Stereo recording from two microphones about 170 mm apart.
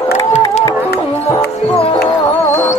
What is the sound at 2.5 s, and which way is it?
Music, 45° left (ahead or behind).